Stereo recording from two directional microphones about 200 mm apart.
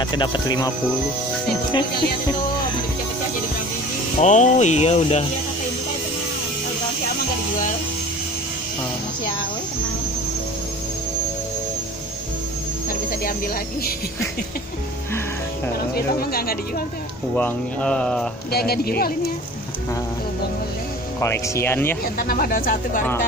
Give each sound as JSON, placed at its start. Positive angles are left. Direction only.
{"t": 0.0, "sound": "speech", "side_deg": 20}
{"t": 4.2, "sound": "speech", "side_deg": 35}
{"t": 15.9, "sound": "speech", "side_deg": 50}
{"t": 17.4, "sound": "speech", "side_deg": 5}
{"t": 18.5, "sound": "speech", "side_deg": 50}
{"t": 21.2, "sound": "speech", "side_deg": 15}
{"t": 22.0, "sound": "speech", "side_deg": 50}